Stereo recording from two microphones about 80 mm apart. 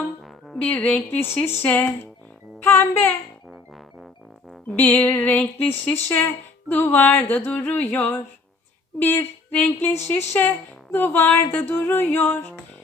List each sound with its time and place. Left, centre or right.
0.6 s a child's voice: centre
4.7 s speech: left